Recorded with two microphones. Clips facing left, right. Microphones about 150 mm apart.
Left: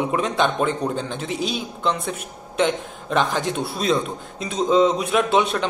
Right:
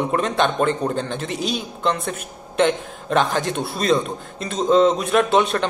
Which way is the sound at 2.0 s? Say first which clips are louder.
Right 1 dB; centre (ahead or behind).